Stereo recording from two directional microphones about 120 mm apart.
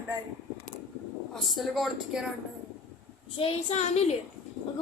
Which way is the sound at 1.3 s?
Centre (ahead or behind).